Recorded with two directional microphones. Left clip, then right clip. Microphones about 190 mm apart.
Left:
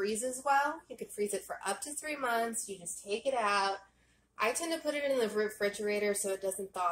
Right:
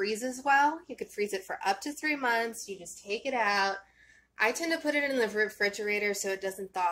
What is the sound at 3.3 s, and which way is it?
Speech, 55° right (ahead or behind).